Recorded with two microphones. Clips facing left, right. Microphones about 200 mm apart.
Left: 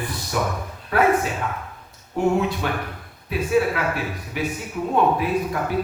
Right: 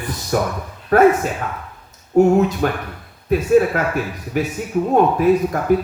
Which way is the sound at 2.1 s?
45° right (ahead or behind).